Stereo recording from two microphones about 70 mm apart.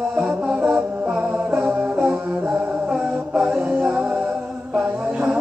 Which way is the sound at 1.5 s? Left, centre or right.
Centre.